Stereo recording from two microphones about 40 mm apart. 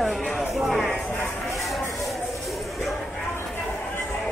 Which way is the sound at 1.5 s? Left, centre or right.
Centre.